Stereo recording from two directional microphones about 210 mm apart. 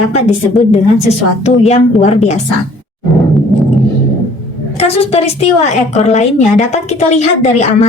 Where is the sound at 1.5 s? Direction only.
30° left (ahead or behind).